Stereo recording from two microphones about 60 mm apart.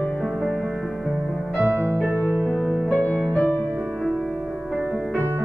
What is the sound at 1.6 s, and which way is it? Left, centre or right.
Music, right.